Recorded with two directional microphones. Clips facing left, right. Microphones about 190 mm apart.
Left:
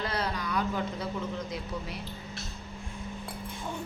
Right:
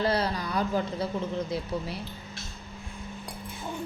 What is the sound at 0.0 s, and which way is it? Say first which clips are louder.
Speech: right 5 dB; 35° right (ahead or behind).